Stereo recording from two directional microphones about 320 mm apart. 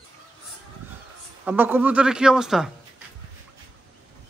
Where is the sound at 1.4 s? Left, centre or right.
Centre.